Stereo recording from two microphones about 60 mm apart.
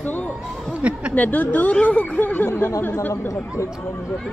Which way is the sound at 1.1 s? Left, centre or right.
Left.